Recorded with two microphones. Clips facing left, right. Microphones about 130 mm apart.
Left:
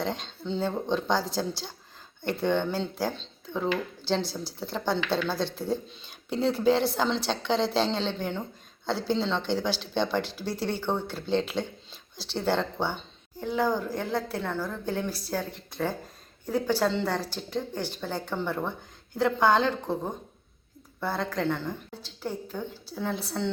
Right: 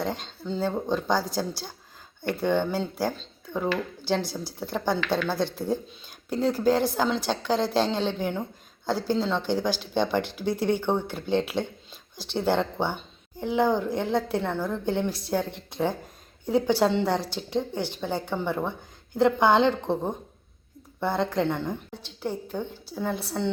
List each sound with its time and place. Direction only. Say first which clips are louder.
0.0 s a woman's voice: right 1 dB; 5° right (ahead or behind)
2.3 s a woman's voice: right 2 dB; 5° right (ahead or behind)
9.6 s speech: right 2 dB; 45° right (ahead or behind)
9.9 s a woman's voice: right 2 dB; 10° right (ahead or behind)
10.2 s speech: right 5 dB; 55° right (ahead or behind)
10.6 s a woman's voice: right 4 dB; 15° right (ahead or behind)
11.9 s a sound: right 1 dB; 50° right (ahead or behind)
12.5 s a woman's voice: right 2 dB; 15° right (ahead or behind)